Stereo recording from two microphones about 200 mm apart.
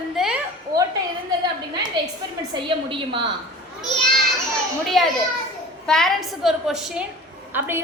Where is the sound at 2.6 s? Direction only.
25° right (ahead or behind).